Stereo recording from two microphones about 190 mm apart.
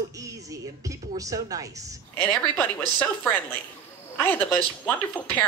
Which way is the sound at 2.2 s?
10° left (ahead or behind).